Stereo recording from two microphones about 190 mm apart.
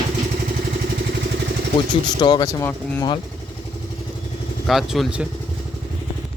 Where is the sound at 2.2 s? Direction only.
25° left (ahead or behind).